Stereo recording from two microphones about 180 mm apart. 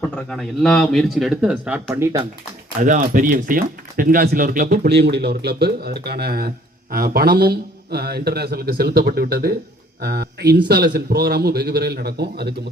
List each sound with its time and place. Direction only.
0.3 s speech: 5° left (ahead or behind)
2.8 s speech: 45° right (ahead or behind); by 12.5 s 65° right (ahead or behind)